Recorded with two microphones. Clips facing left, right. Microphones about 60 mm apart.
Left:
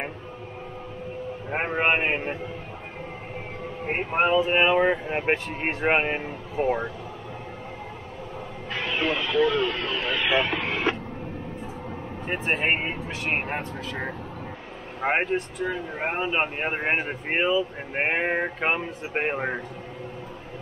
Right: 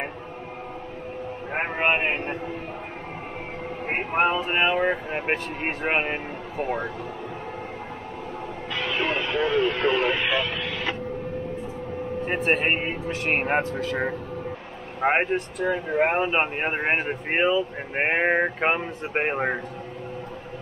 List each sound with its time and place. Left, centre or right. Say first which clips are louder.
1.5 s speech: even; centre
4.1 s speech: even; centre
4.5 s speech: left 2 dB; centre
8.7 s speech: even; right
10.4 s radio: left 3 dB; left
13.3 s speech: right 4 dB; right
15.0 s speech: right 3 dB; centre
15.6 s speech: right 6 dB; right
16.3 s speech: right 2 dB; centre